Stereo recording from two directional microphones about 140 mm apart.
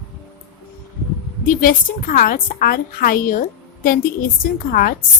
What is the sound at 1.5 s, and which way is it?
A woman's voice, 85° left.